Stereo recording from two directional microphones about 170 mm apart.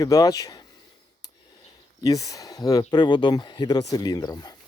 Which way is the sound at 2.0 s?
20° left (ahead or behind).